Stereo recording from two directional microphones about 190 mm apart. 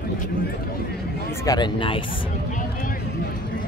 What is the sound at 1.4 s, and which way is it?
Speech, 20° left (ahead or behind).